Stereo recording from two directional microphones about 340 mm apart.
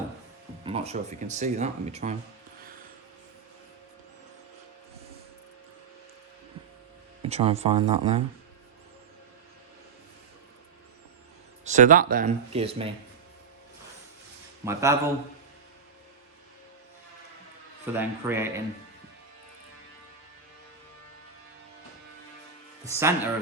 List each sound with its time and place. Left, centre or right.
0.6 s speech: centre
7.2 s speech: centre
11.6 s speech: right
14.6 s speech: centre
17.9 s a man's voice: centre
22.9 s speech: centre